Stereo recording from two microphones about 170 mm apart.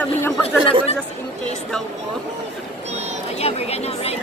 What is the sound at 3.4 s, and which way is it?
Speech, 35° left (ahead or behind).